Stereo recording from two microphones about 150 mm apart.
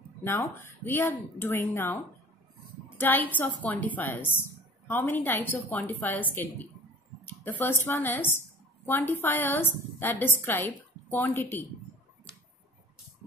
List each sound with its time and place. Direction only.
0.2 s a woman's voice: 15° left (ahead or behind)
3.0 s a woman's voice: 10° left (ahead or behind)